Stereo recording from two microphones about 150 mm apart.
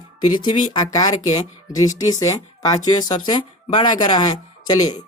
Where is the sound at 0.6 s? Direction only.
30° left (ahead or behind).